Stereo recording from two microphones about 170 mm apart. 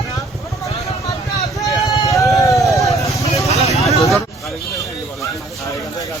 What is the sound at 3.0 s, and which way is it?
Vehicle, 20° left (ahead or behind).